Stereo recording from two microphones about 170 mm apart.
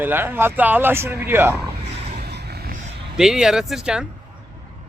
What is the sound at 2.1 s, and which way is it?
Vehicle, 75° right (ahead or behind).